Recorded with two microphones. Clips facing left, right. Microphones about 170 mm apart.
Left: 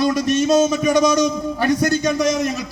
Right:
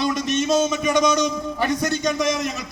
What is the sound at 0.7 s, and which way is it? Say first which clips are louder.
A man's voice: left 3 dB; 35° left (ahead or behind).